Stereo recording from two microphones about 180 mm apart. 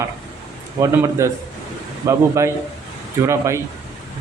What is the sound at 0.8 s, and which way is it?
Speech, 20° right (ahead or behind).